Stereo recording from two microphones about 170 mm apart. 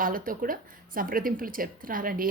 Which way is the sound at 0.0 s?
55° right (ahead or behind).